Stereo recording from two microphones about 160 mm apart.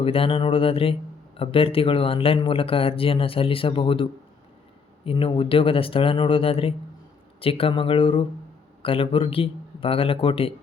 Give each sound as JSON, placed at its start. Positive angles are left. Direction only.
{"t": 0.0, "sound": "speech", "side_deg": 35}